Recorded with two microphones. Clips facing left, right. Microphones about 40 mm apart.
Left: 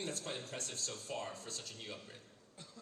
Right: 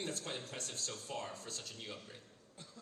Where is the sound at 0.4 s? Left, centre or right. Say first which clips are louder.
Left 1 dB; left.